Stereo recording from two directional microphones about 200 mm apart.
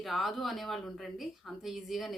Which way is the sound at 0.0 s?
Centre (ahead or behind).